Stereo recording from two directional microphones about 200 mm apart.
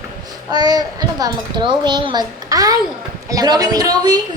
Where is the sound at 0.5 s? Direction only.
20° right (ahead or behind).